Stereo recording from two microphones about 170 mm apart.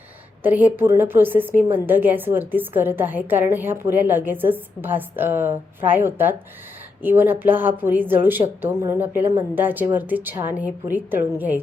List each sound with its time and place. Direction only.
0.4 s a woman's voice: 10° right (ahead or behind)